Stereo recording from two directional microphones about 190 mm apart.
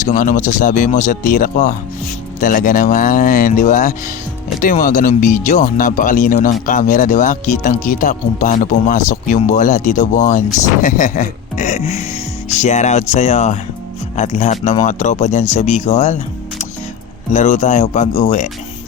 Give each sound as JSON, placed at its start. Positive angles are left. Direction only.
{"t": 0.0, "sound": "speech", "side_deg": 45}